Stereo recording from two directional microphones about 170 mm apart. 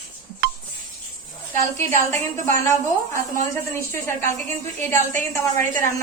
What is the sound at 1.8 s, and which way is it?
A woman's voice, 15° left (ahead or behind).